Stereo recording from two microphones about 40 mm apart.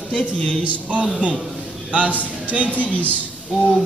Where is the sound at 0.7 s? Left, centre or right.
Right.